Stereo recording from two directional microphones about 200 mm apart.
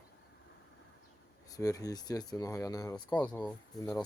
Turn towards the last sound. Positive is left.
turn(degrees=10)  # may be behind; listen again after turning